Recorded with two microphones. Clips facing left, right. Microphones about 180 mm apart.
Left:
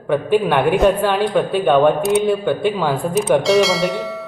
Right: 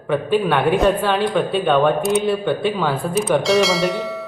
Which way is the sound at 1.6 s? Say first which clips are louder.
Left 3 dB; 15° left (ahead or behind).